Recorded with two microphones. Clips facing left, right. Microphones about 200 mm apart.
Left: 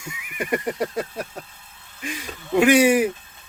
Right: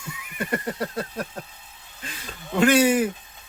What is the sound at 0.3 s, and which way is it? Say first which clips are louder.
Speech: left 3 dB; 15° left (ahead or behind).